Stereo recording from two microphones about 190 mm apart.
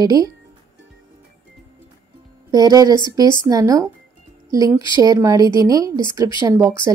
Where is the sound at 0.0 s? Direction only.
20° right (ahead or behind).